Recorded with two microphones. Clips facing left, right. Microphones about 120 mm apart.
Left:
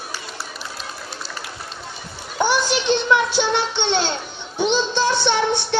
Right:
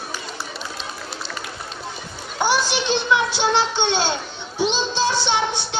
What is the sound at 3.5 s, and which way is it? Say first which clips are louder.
Speech: right 1 dB; 60° left (ahead or behind).